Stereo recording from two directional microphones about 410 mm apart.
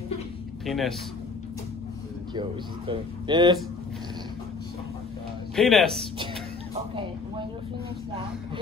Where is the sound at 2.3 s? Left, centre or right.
Centre.